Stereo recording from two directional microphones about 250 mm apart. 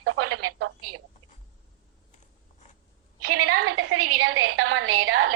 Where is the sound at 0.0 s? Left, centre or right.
Right.